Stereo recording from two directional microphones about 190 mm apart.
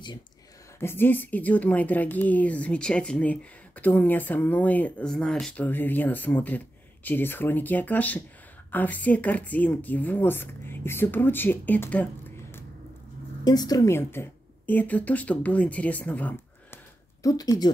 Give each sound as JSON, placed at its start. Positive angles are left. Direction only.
{"t": 0.7, "sound": "a woman's voice", "side_deg": 10}
{"t": 13.4, "sound": "a woman's voice", "side_deg": 20}
{"t": 17.2, "sound": "speech", "side_deg": 20}